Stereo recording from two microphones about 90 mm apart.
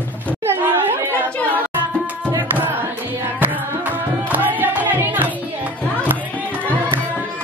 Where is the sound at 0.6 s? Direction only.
25° right (ahead or behind).